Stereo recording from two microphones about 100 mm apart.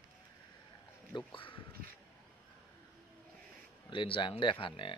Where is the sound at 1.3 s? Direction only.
60° left (ahead or behind).